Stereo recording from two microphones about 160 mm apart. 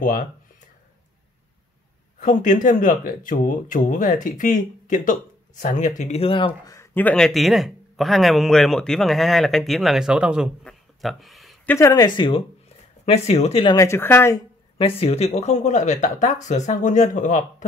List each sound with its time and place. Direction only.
2.1 s speech: 55° left (ahead or behind); by 6.7 s 35° left (ahead or behind)
6.7 s speech: 15° left (ahead or behind); by 10.5 s 5° right (ahead or behind)
10.6 s a sound: centre (ahead or behind)
11.6 s speech: 15° left (ahead or behind); by 13.7 s 35° left (ahead or behind)
13.7 s speech: 15° left (ahead or behind)
14.8 s speech: 40° left (ahead or behind)